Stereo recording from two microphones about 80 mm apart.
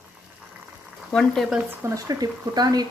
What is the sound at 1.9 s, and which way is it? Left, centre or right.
Speech, right.